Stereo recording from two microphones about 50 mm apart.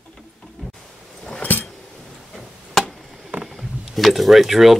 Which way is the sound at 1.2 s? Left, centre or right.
Left.